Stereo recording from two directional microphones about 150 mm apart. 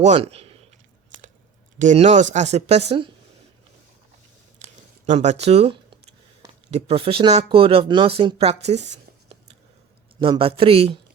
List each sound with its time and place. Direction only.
0.0 s a man's voice: 45° right (ahead or behind)
1.8 s speech: 50° right (ahead or behind)
4.6 s a sound: 50° right (ahead or behind)
6.7 s speech: 45° right (ahead or behind)
10.2 s speech: 35° right (ahead or behind)